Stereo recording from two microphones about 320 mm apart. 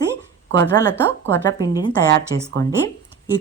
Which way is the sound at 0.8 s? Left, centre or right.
Centre.